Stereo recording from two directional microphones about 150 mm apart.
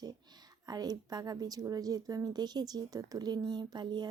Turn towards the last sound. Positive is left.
turn(degrees=-30)  # may be behind; listen again after turning